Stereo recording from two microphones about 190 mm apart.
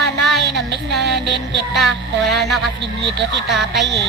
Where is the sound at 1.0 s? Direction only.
65° right (ahead or behind).